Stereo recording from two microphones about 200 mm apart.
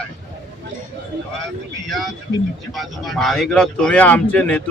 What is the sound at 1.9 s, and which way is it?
A man's voice, centre (ahead or behind).